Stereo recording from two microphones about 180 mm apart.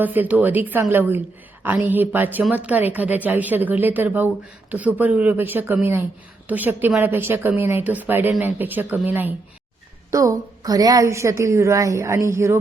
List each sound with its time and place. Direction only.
0.0 s a woman's voice: 10° right (ahead or behind)
10.1 s a woman's voice: 20° right (ahead or behind)